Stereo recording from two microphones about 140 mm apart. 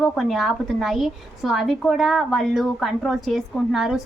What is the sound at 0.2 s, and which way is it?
A woman's voice, centre (ahead or behind).